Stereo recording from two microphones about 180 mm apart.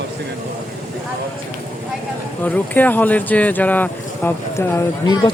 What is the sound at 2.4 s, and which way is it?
Speech, 10° left (ahead or behind).